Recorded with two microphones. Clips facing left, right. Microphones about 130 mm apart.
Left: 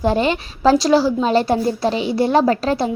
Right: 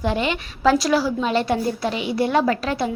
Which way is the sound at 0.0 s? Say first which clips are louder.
Left 5 dB; 35° left (ahead or behind).